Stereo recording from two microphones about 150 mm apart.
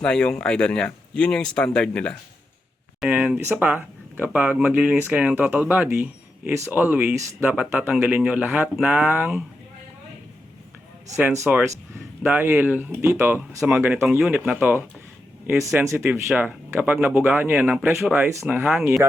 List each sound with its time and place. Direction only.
0.0 s speech: 5° left (ahead or behind)
3.0 s speech: 10° right (ahead or behind)
11.2 s speech: 15° right (ahead or behind)